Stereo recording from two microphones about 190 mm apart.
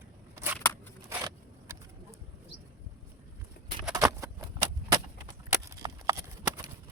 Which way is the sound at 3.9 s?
20° right (ahead or behind).